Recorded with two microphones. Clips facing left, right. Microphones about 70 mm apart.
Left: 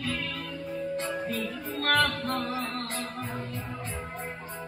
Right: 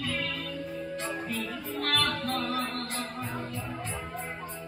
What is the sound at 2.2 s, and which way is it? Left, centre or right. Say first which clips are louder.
Music: left 1 dB; left.